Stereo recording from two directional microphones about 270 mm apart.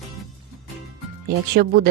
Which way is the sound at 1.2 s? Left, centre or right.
Right.